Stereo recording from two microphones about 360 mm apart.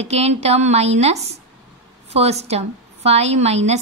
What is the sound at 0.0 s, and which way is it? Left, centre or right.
A woman's voice, centre.